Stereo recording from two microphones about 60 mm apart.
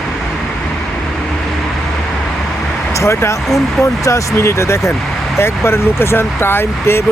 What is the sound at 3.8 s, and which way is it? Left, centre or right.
Speech, left.